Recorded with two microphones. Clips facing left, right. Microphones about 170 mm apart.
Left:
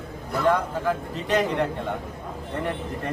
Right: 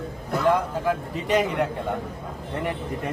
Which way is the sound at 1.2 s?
10° right (ahead or behind).